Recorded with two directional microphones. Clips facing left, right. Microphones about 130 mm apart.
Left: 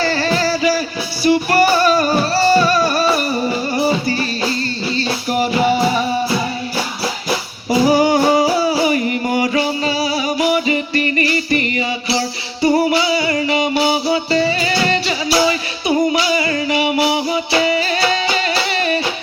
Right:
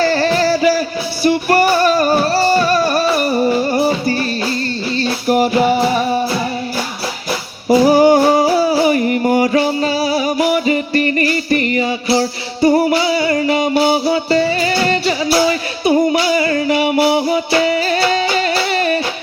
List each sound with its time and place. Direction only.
0.0 s music: 45° right (ahead or behind)
5.3 s music: 45° right (ahead or behind)
7.7 s singing: 50° right (ahead or behind)
10.5 s music: 45° right (ahead or behind)